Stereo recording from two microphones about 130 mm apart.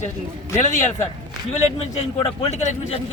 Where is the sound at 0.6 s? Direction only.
65° left (ahead or behind).